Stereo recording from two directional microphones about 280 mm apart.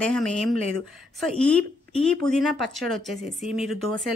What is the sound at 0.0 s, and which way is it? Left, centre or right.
A woman's voice, centre.